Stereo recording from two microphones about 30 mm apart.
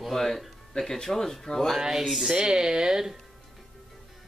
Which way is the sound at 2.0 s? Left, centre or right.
Centre.